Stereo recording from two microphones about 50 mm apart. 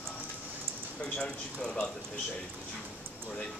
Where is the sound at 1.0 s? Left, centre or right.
Centre.